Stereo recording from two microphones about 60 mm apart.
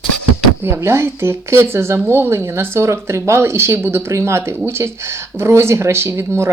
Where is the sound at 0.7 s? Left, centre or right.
Right.